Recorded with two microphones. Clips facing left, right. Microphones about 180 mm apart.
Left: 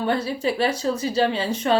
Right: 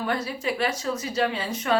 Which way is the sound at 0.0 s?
30° left (ahead or behind).